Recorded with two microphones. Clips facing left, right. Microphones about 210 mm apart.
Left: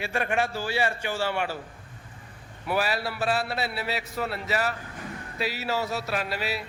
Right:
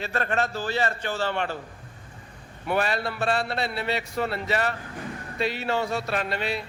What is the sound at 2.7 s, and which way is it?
A man's voice, 5° left (ahead or behind).